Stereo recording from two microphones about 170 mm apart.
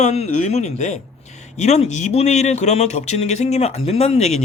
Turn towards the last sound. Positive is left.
turn(degrees=40)  # may be behind; listen again after turning